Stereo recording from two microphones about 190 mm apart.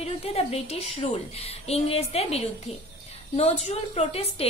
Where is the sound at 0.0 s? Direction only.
35° left (ahead or behind).